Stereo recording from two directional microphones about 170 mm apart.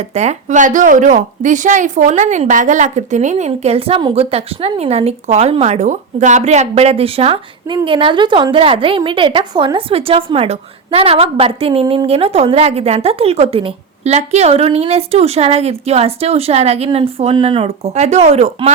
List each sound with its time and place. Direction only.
0.1 s a woman's voice: 40° right (ahead or behind)